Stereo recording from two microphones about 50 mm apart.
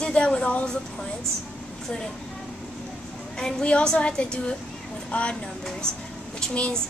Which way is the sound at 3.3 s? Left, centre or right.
Centre.